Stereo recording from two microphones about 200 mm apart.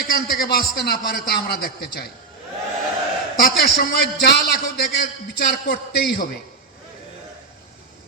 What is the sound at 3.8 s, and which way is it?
A man's voice, 50° left (ahead or behind).